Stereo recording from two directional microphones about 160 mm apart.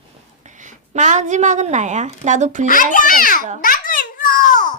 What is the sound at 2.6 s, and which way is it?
A child's voice, 55° left (ahead or behind).